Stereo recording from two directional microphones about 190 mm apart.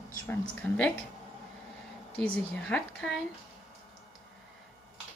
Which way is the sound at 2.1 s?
5° left (ahead or behind).